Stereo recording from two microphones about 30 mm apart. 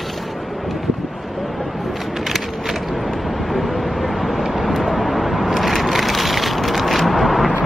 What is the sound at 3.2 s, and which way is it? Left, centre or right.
Vehicle, centre.